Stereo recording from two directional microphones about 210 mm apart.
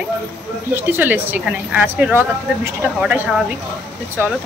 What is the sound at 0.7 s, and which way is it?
A woman's voice, 10° right (ahead or behind).